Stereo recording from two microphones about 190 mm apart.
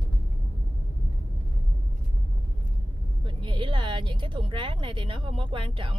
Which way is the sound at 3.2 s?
25° right (ahead or behind).